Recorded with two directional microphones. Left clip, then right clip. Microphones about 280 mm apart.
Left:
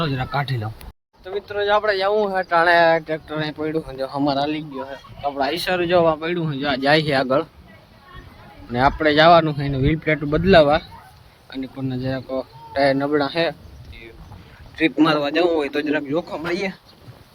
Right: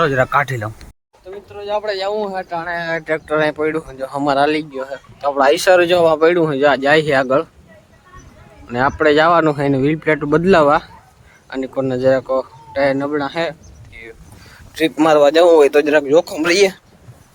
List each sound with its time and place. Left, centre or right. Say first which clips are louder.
0.0 s speech: right 10 dB; centre
3.1 s speech: right 9 dB; centre
8.7 s speech: right 3 dB; centre
14.8 s speech: right 6 dB; centre